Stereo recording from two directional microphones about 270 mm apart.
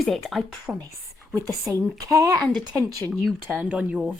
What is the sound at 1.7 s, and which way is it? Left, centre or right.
Speech, centre.